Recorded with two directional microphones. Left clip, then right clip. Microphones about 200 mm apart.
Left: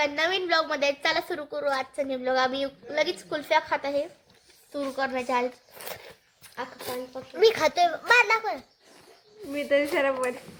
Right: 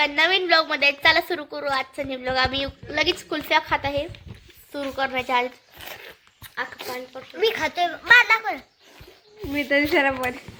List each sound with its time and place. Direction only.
0.0 s a woman's voice: 5° right (ahead or behind)
2.5 s a woman's voice: 20° right (ahead or behind)
7.3 s a child's voice: 40° left (ahead or behind)
8.1 s a child's voice: 20° left (ahead or behind)
9.5 s speech: 55° right (ahead or behind)